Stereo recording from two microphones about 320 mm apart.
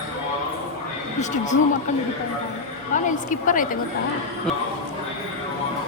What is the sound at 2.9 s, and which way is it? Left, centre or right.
Speech, left.